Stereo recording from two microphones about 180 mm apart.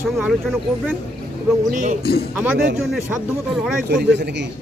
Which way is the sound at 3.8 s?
65° right (ahead or behind).